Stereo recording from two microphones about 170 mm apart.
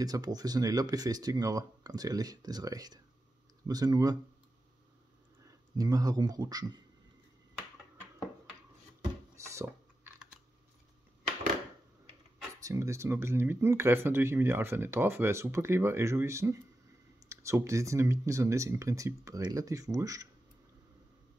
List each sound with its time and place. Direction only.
0.0 s speech: 20° right (ahead or behind)
5.8 s speech: 20° right (ahead or behind)
9.5 s a sound: 15° right (ahead or behind)
12.6 s speech: 15° right (ahead or behind)